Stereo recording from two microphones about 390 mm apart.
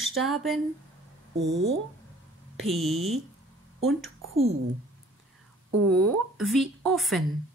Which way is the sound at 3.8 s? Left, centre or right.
Right.